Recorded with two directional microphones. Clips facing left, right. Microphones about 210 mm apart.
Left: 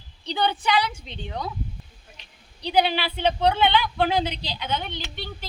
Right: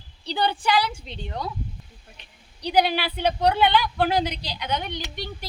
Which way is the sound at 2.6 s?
10° right (ahead or behind).